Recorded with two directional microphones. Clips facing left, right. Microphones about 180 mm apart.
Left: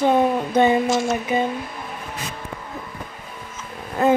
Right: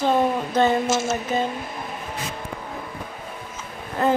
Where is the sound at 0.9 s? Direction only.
5° right (ahead or behind).